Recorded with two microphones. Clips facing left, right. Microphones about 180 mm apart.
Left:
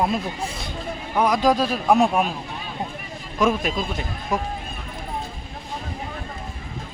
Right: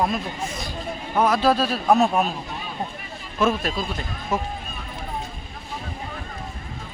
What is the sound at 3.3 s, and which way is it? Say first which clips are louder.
A man's voice: left 1 dB; 15° left (ahead or behind).